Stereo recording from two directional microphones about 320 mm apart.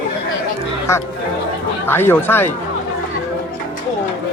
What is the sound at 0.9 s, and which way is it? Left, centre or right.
Speech, centre.